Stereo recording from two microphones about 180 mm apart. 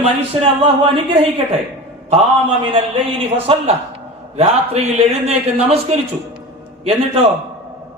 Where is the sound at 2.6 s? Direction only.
30° right (ahead or behind).